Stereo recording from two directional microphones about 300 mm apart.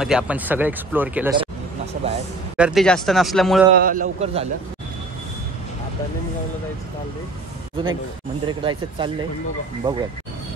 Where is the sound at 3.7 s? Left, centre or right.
Right.